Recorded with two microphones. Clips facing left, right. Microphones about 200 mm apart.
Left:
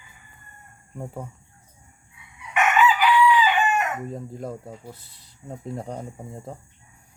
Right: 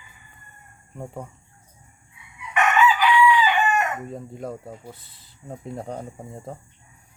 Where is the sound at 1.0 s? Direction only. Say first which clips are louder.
Even; 5° left (ahead or behind).